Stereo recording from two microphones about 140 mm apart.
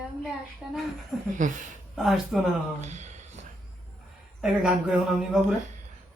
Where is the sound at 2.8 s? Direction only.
55° right (ahead or behind).